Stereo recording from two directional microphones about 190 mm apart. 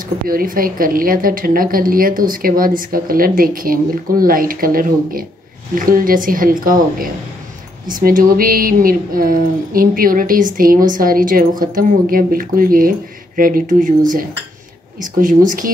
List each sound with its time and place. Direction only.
0.3 s a woman's voice: 50° right (ahead or behind)